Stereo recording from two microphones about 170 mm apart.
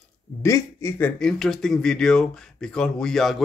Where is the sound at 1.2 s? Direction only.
Centre (ahead or behind).